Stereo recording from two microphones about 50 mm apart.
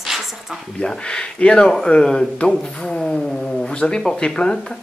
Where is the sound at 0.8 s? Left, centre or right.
Centre.